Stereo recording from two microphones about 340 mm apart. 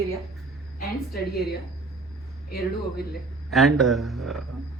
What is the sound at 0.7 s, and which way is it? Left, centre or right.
Speech, left.